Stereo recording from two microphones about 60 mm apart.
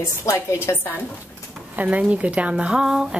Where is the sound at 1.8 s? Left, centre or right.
Right.